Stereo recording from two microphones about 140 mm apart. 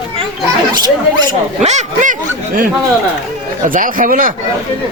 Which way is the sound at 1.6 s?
55° right (ahead or behind).